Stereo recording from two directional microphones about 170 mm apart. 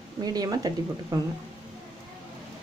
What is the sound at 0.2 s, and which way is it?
Speech, 25° right (ahead or behind).